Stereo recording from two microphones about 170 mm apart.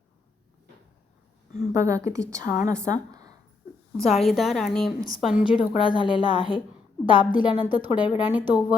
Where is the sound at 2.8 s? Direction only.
20° right (ahead or behind).